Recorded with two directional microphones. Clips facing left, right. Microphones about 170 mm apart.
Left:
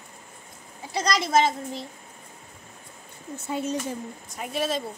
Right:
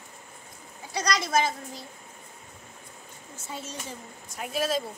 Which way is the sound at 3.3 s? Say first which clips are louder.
Left 11 dB; 60° left (ahead or behind).